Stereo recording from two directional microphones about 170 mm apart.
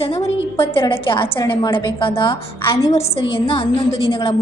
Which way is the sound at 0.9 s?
30° left (ahead or behind).